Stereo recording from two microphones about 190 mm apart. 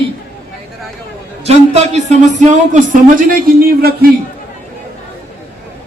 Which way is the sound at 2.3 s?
40° right (ahead or behind).